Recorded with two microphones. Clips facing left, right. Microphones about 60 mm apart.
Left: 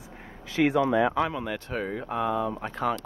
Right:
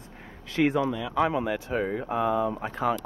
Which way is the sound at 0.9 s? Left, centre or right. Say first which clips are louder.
Left 9 dB; left.